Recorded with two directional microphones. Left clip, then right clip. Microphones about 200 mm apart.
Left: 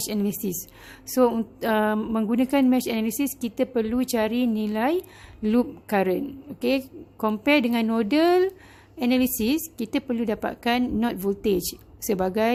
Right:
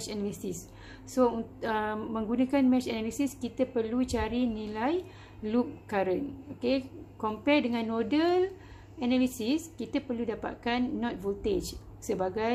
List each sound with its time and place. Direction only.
0.0 s a woman's voice: 50° left (ahead or behind)